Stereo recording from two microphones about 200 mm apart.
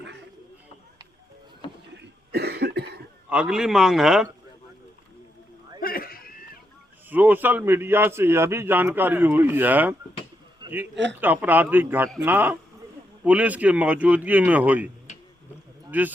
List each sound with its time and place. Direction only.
2.0 s cough: 55° right (ahead or behind)
3.2 s a man's voice: 5° right (ahead or behind)
5.8 s a sound: 50° left (ahead or behind)
7.1 s a man's voice: 10° right (ahead or behind)
10.6 s a sound: 20° right (ahead or behind)
10.9 s a man's voice: 65° right (ahead or behind)
11.2 s a man's voice: 10° right (ahead or behind)
15.9 s speech: 10° right (ahead or behind)